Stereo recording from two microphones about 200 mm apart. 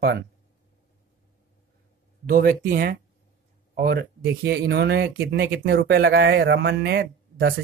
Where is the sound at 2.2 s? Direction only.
45° right (ahead or behind).